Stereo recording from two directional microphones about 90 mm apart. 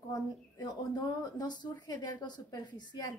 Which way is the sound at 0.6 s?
50° left (ahead or behind).